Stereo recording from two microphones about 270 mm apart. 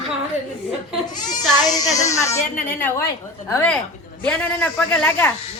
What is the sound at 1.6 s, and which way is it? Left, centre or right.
A woman's voice, centre.